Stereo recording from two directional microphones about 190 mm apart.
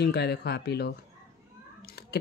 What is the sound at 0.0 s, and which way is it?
Speech, 60° left (ahead or behind).